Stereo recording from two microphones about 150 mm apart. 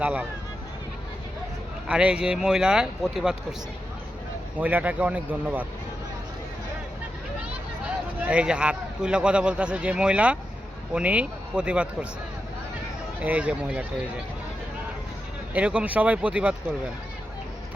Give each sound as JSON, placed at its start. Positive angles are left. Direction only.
{"t": 0.0, "sound": "speech", "side_deg": -10}
{"t": 1.9, "sound": "speech", "side_deg": -5}
{"t": 4.6, "sound": "speech", "side_deg": -10}
{"t": 7.9, "sound": "a man's voice", "side_deg": -5}
{"t": 13.2, "sound": "speech", "side_deg": -10}
{"t": 15.5, "sound": "speech", "side_deg": -10}